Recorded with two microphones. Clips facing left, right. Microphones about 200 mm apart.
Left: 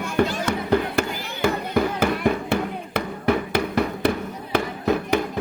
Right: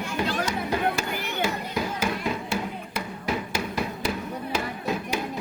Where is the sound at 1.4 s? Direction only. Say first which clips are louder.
Left 10 dB; 60° left (ahead or behind).